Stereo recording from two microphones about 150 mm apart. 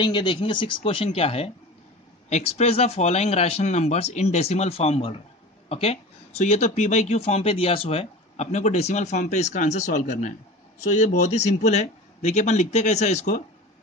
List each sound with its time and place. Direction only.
0.0 s speech: 30° left (ahead or behind); by 13.4 s 50° left (ahead or behind)